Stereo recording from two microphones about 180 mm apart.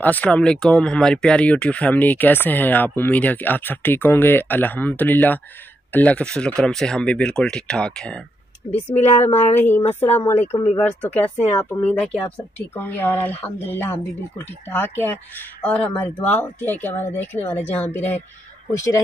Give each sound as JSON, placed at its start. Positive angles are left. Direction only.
{"t": 0.0, "sound": "speech", "side_deg": 10}
{"t": 8.9, "sound": "speech", "side_deg": 35}
{"t": 9.6, "sound": "speech", "side_deg": 10}